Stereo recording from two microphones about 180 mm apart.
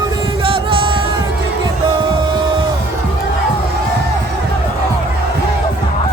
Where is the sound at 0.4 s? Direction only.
30° right (ahead or behind).